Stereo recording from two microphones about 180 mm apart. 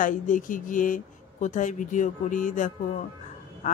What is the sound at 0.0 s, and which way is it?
Speech, 45° left (ahead or behind).